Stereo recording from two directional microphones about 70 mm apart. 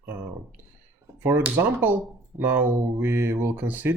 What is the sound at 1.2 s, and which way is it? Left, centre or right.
Speech, right.